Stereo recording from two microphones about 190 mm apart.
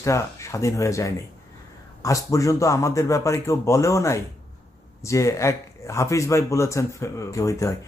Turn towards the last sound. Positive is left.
turn(degrees=15)  # may be behind; listen again after turning